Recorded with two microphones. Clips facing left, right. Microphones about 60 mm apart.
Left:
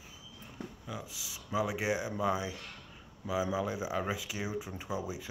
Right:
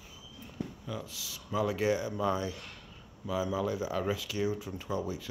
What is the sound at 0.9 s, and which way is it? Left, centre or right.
Speech, centre.